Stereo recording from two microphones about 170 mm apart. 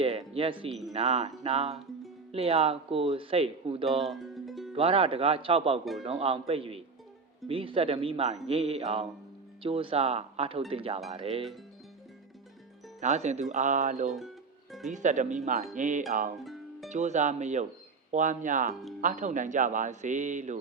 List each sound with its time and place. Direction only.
0.0 s speech: 35° right (ahead or behind)
4.0 s music: centre (ahead or behind)
4.7 s speech: 35° right (ahead or behind)
13.0 s a man's voice: 40° right (ahead or behind)
14.1 s music: centre (ahead or behind)
14.8 s a man's voice: 45° right (ahead or behind)
16.4 s music: centre (ahead or behind)
16.9 s a man's voice: 45° right (ahead or behind)
18.7 s speech: centre (ahead or behind)
19.0 s a man's voice: 45° right (ahead or behind)